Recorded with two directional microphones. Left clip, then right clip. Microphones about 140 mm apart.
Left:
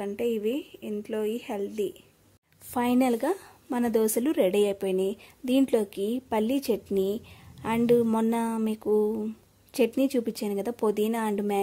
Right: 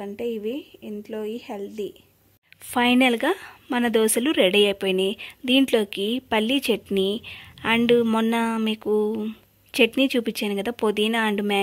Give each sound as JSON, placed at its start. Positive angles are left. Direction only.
{"t": 0.0, "sound": "a woman's voice", "side_deg": 0}